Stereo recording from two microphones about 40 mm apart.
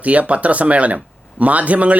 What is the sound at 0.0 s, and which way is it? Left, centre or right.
Speech, right.